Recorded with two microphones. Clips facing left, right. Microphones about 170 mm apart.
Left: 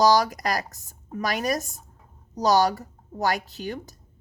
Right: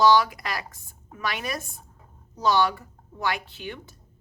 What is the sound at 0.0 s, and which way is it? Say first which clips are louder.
A woman's voice: even; 40° left (ahead or behind).